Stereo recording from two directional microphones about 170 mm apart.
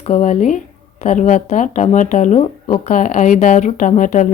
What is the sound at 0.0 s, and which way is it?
Speech, 40° left (ahead or behind).